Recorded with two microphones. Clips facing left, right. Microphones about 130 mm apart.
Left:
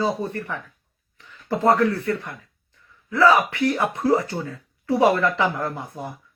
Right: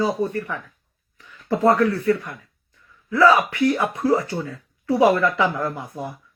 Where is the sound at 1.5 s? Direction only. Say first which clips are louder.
Right 1 dB; 30° left (ahead or behind).